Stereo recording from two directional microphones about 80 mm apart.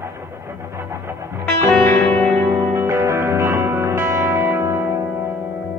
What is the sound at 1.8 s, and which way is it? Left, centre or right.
Music, centre.